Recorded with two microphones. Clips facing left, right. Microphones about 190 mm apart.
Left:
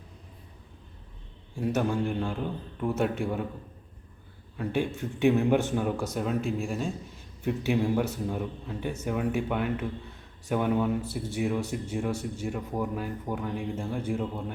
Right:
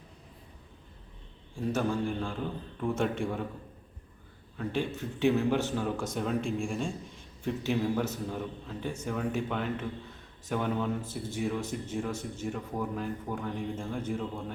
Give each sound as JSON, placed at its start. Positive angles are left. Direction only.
{"t": 1.6, "sound": "a man's voice", "side_deg": 10}
{"t": 4.5, "sound": "a man's voice", "side_deg": 10}
{"t": 6.1, "sound": "a man's voice", "side_deg": 5}